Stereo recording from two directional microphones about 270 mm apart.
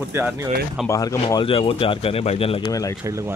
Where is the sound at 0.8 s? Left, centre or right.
Centre.